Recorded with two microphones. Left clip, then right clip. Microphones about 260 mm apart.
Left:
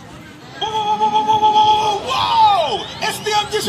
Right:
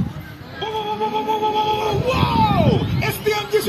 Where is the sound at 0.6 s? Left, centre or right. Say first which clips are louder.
Left 6 dB; left.